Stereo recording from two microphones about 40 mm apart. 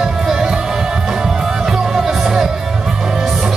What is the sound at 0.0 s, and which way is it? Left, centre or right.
Music, centre.